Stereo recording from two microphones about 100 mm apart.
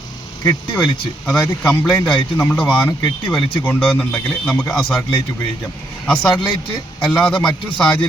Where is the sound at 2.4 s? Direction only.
15° left (ahead or behind).